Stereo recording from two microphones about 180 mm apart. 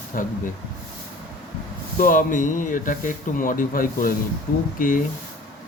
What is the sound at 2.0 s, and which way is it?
Speech, 50° left (ahead or behind).